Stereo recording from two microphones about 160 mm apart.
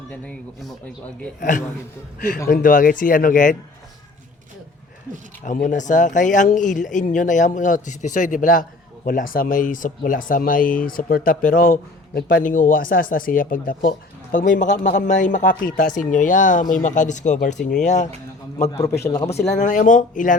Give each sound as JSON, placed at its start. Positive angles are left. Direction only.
{"t": 0.1, "sound": "speech", "side_deg": 5}
{"t": 1.4, "sound": "a man's voice", "side_deg": 55}
{"t": 5.6, "sound": "a man's voice", "side_deg": 50}
{"t": 18.6, "sound": "a man's voice", "side_deg": 20}
{"t": 19.5, "sound": "speech", "side_deg": 50}